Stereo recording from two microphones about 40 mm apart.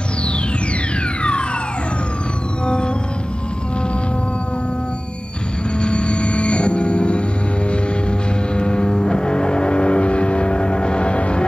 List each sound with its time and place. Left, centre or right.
2.6 s music: left
5.8 s music: left
8.5 s vehicle: left